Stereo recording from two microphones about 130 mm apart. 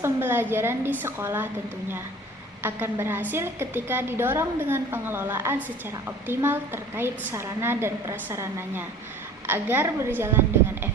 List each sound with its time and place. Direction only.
0.0 s a woman's voice: 15° right (ahead or behind)
2.6 s a woman's voice: 15° right (ahead or behind)